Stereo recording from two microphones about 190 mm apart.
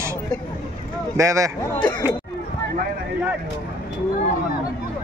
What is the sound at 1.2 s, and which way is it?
Speech, 15° right (ahead or behind).